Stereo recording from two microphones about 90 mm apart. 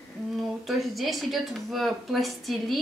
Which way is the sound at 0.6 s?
Centre (ahead or behind).